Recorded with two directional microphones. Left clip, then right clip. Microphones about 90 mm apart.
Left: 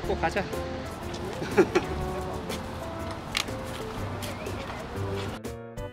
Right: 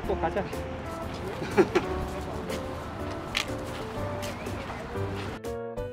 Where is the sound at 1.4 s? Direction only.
10° left (ahead or behind).